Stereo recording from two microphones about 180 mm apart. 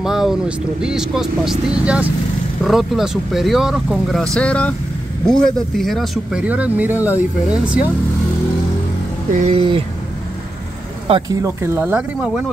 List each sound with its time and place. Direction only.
0.0 s speech: centre (ahead or behind)
9.3 s speech: 40° right (ahead or behind)
9.6 s speech: 30° right (ahead or behind)
11.1 s speech: 30° right (ahead or behind)
11.4 s speech: 15° right (ahead or behind)